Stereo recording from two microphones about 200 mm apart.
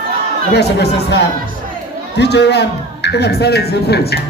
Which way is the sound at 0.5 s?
55° left (ahead or behind).